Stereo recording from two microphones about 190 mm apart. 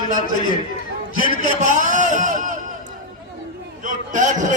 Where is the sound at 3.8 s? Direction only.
40° right (ahead or behind).